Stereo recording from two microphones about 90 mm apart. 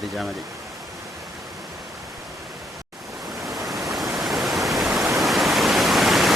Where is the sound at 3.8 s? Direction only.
5° right (ahead or behind).